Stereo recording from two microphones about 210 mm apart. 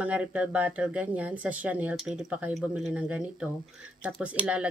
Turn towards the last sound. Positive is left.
turn(degrees=-5)  # may be behind; listen again after turning